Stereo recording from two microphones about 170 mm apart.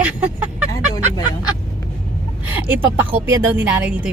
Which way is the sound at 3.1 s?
10° right (ahead or behind).